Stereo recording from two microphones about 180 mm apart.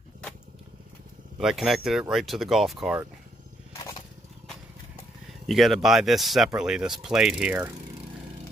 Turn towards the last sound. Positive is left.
turn(degrees=-5)  # may be behind; listen again after turning